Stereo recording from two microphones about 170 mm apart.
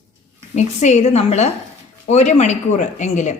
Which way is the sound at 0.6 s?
40° left (ahead or behind).